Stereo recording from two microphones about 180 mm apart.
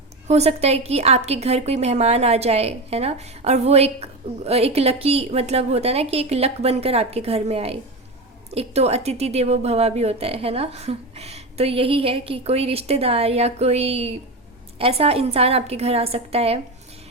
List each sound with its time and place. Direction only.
0.3 s a woman's voice: 35° right (ahead or behind)